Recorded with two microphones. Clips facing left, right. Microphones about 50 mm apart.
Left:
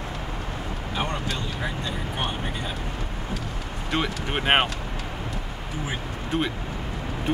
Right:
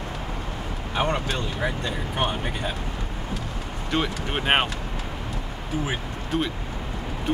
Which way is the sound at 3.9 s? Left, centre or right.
Centre.